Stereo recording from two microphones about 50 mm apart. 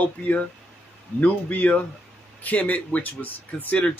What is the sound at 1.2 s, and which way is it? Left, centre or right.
Speech, left.